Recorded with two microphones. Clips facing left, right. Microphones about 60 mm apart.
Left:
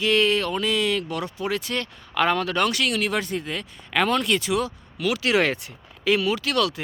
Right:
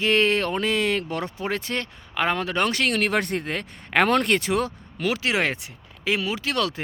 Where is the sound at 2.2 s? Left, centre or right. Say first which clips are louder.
Left 2 dB; right.